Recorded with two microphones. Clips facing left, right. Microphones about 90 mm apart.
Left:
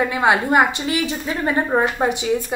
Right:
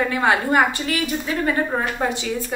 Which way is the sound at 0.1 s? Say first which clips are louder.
Left 2 dB; 15° left (ahead or behind).